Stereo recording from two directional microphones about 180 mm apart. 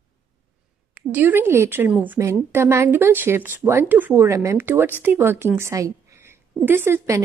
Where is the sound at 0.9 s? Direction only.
10° right (ahead or behind).